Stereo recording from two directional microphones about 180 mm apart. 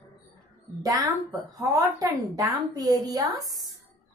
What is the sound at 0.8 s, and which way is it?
A woman's voice, 20° right (ahead or behind).